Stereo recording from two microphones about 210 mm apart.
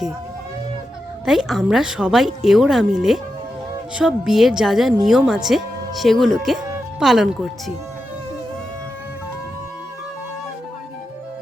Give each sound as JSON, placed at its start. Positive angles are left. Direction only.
{"t": 1.2, "sound": "speech", "side_deg": 0}